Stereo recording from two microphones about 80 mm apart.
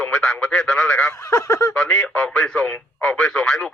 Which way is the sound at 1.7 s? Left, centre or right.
Centre.